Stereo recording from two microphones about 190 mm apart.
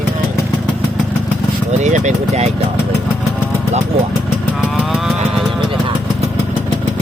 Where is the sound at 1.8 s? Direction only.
40° right (ahead or behind).